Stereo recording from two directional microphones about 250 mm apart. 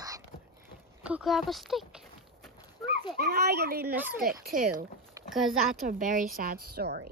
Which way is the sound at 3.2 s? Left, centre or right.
Right.